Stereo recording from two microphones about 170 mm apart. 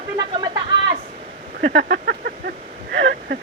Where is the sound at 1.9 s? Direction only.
65° right (ahead or behind); by 3.3 s 85° right.